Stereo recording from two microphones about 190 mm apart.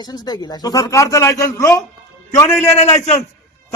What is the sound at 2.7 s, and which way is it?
Music, 35° left (ahead or behind).